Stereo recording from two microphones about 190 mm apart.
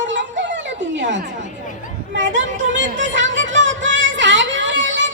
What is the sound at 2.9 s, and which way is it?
Speech, 75° right (ahead or behind).